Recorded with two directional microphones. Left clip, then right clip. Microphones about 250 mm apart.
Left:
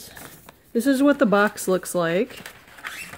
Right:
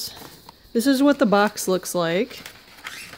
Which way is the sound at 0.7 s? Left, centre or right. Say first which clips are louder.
Right 1 dB; centre.